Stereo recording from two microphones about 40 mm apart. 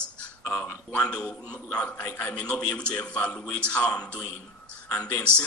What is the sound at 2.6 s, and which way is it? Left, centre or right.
Speech, left.